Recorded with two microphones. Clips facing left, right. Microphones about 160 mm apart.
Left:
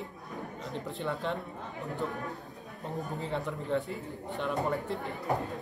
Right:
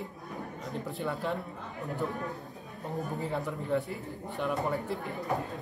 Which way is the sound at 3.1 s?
5° right (ahead or behind).